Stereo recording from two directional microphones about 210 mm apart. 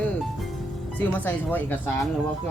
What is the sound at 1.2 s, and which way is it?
Speech, 10° left (ahead or behind).